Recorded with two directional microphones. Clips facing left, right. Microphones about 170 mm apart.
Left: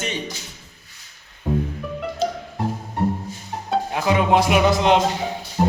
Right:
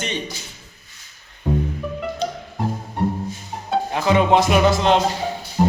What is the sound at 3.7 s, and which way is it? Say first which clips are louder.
Music: right 2 dB; 5° left (ahead or behind).